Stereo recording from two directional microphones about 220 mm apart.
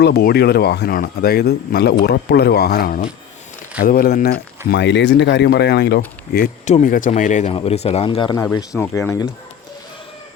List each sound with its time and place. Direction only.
0.0 s speech: 45° left (ahead or behind)
4.7 s speech: 55° left (ahead or behind)
6.3 s speech: 35° left (ahead or behind); by 9.3 s 15° left (ahead or behind)